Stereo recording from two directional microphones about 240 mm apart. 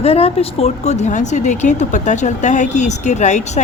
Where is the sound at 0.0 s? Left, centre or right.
Left.